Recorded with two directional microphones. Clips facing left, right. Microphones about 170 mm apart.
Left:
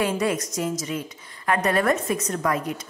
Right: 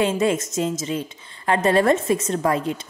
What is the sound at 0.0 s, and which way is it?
A woman's voice, 25° right (ahead or behind).